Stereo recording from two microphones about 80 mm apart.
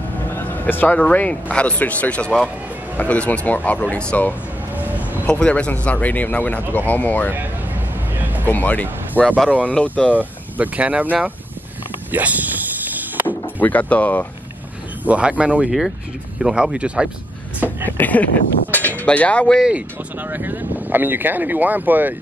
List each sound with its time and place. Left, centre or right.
0.4 s vehicle: left
1.1 s speech: centre
4.7 s a sound: right
5.2 s speech: centre
8.5 s speech: left
10.1 s speech: centre
12.1 s vehicle: right
13.6 s speech: left
15.0 s speech: centre
17.9 s speech: left
20.2 s speech: right